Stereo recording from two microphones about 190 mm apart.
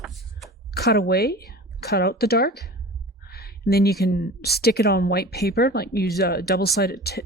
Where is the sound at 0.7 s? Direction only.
55° left (ahead or behind).